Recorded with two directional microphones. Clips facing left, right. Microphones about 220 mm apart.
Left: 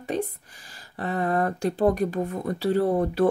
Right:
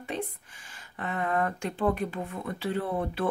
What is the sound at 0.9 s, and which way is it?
Speech, 35° left (ahead or behind).